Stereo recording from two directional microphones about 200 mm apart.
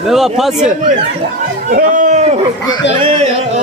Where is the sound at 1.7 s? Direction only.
45° right (ahead or behind).